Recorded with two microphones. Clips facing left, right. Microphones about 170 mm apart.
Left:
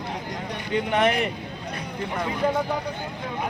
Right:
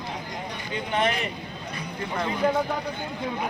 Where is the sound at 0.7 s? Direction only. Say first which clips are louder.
Left 4 dB; 65° left (ahead or behind).